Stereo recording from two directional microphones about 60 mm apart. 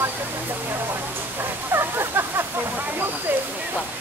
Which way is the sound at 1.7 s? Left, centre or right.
Right.